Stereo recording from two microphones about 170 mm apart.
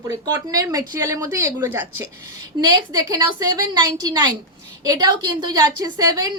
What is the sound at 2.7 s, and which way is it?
A woman's voice, 20° right (ahead or behind).